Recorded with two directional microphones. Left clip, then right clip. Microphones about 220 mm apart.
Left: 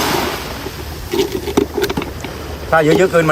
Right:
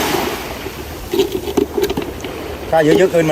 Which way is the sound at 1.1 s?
30° left (ahead or behind).